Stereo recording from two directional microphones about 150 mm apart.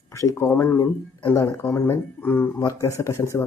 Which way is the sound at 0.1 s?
20° left (ahead or behind).